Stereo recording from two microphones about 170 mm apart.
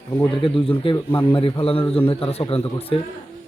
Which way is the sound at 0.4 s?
30° left (ahead or behind).